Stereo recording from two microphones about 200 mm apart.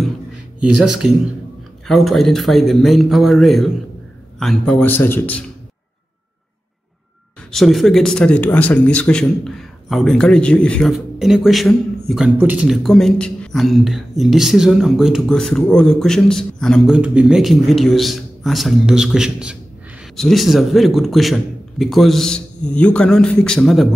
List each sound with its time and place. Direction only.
0.7 s a man's voice: 5° right (ahead or behind)
7.5 s speech: centre (ahead or behind)